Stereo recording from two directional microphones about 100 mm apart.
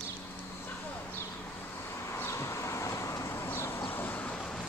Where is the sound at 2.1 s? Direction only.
25° left (ahead or behind).